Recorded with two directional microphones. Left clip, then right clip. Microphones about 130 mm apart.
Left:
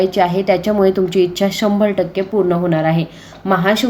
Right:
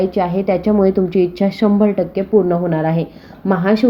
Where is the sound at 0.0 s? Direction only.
30° right (ahead or behind).